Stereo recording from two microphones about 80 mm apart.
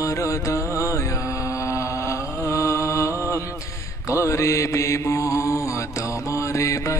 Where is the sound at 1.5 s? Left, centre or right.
Left.